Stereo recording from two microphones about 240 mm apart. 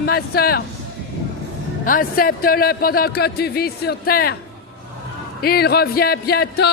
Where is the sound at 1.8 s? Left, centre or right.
Left.